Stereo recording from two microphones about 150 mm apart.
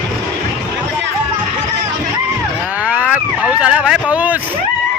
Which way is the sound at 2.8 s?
10° right (ahead or behind).